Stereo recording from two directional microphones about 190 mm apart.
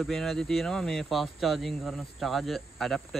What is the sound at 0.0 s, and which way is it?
Speech, centre (ahead or behind).